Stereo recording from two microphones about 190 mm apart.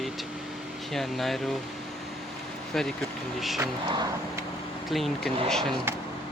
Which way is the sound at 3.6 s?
15° right (ahead or behind).